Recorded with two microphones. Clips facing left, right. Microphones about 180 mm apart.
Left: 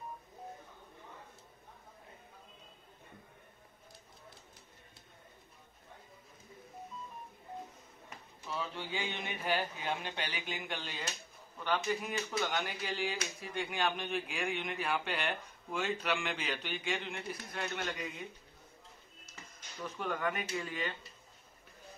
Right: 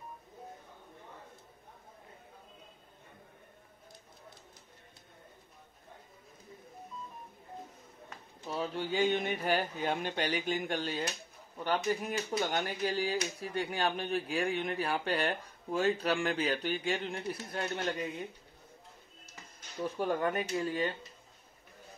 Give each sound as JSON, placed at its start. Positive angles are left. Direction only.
{"t": 8.5, "sound": "speech", "side_deg": -45}
{"t": 19.8, "sound": "speech", "side_deg": -30}